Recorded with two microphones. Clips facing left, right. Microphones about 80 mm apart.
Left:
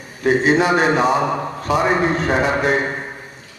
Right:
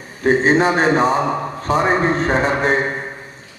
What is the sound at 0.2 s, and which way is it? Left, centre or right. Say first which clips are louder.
A man's voice: right 1 dB; right.